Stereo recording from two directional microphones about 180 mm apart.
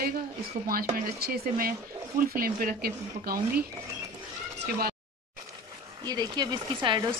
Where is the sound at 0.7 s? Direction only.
55° right (ahead or behind).